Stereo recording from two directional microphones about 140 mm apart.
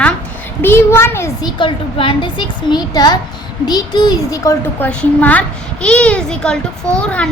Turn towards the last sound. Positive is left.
turn(degrees=10)  # may be behind; listen again after turning